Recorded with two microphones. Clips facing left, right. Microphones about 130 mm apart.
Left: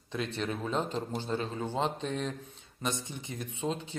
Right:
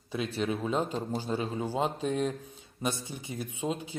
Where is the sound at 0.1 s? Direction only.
5° right (ahead or behind).